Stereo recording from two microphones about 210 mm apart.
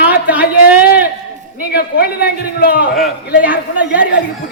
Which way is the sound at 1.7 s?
50° left (ahead or behind).